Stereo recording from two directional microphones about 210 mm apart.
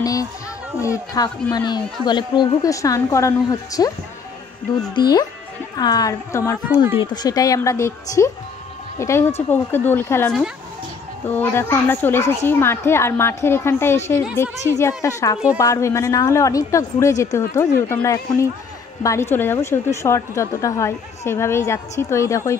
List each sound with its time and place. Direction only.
0.0 s a child's voice: 15° left (ahead or behind)
4.9 s a woman's voice: 20° left (ahead or behind)
6.7 s speech: 10° right (ahead or behind)
7.1 s a woman's voice: 15° left (ahead or behind)